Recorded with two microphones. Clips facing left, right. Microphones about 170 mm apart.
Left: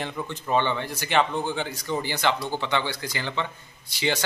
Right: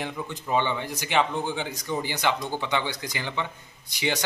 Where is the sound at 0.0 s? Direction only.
15° right (ahead or behind).